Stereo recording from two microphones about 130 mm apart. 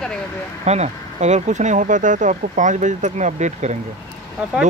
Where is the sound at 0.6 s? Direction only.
60° right (ahead or behind).